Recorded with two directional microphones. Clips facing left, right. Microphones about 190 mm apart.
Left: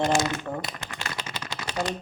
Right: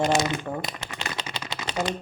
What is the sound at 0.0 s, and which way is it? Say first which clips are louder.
Speech: right 1 dB; 20° right (ahead or behind).